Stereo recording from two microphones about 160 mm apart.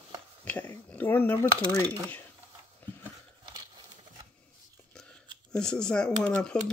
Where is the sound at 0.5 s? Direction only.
10° left (ahead or behind).